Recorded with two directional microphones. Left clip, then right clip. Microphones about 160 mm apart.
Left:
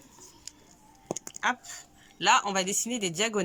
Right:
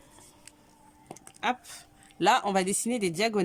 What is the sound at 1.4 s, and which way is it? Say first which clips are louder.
Speech: even; 30° right (ahead or behind).